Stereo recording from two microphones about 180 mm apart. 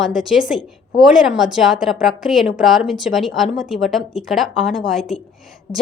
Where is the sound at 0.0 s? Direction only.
Centre (ahead or behind).